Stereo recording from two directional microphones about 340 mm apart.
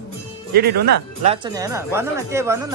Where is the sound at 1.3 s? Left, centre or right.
Centre.